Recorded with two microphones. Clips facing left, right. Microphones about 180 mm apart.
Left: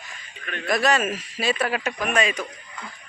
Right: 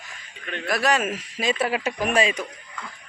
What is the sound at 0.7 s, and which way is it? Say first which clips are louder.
Speech: left 1 dB; 10° right (ahead or behind).